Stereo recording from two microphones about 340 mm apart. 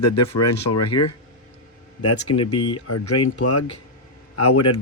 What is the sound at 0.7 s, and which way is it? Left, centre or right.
Speech, left.